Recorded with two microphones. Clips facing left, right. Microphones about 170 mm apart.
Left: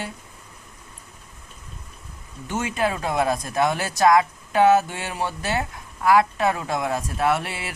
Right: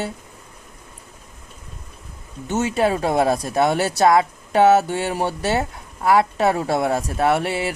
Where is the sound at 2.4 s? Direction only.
30° right (ahead or behind).